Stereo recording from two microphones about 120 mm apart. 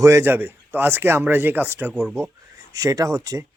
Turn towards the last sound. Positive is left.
turn(degrees=-25)  # may be behind; listen again after turning